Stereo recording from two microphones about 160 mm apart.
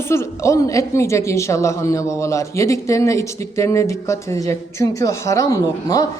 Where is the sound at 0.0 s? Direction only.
15° left (ahead or behind).